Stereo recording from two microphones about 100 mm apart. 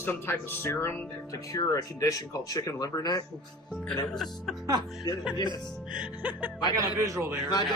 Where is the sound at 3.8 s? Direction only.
5° left (ahead or behind).